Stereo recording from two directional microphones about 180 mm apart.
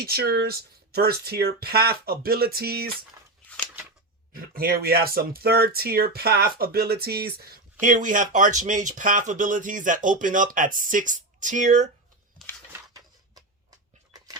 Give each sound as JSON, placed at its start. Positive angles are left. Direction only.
{"t": 0.0, "sound": "speech", "side_deg": -60}
{"t": 4.4, "sound": "speech", "side_deg": -55}